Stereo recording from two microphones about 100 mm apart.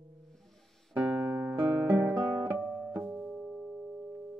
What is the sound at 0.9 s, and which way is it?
Music, 15° right (ahead or behind).